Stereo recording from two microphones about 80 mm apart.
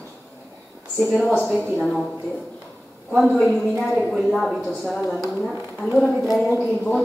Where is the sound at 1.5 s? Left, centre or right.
Centre.